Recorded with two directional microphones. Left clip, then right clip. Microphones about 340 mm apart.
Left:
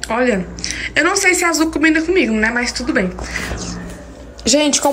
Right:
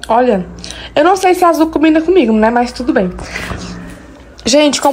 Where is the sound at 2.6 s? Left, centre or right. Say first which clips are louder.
Right 4 dB; centre.